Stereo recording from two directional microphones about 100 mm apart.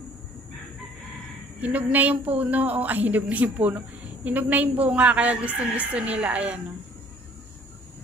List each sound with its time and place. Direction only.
1.6 s a woman's voice: 15° right (ahead or behind)